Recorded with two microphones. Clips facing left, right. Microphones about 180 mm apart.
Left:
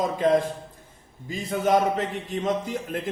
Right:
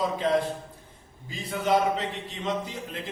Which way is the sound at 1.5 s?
45° left (ahead or behind).